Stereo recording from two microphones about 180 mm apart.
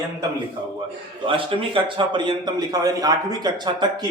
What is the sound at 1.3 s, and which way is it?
A man's voice, 30° right (ahead or behind).